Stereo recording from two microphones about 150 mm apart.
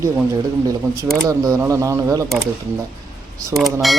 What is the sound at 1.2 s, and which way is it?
Speech, 20° right (ahead or behind).